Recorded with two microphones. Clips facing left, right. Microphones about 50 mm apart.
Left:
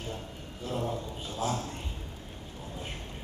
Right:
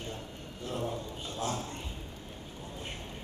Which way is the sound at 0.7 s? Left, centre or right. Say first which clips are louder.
Left 2 dB; centre.